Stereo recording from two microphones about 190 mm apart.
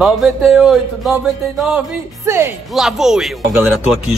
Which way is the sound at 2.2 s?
15° right (ahead or behind).